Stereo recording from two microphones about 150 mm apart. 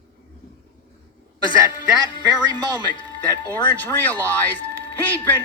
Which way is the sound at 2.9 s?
30° left (ahead or behind).